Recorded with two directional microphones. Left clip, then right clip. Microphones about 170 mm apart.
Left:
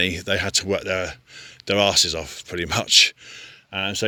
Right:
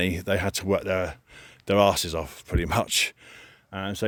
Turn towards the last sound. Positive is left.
turn(degrees=-25)  # may be behind; listen again after turning